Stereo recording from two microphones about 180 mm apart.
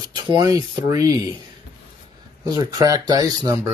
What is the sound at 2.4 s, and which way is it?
Speech, 20° right (ahead or behind).